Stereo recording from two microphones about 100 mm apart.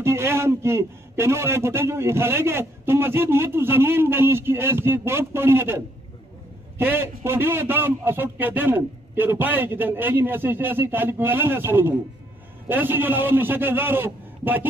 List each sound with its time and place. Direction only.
0.0 s a man's voice: 25° right (ahead or behind)
6.8 s a man's voice: 20° right (ahead or behind)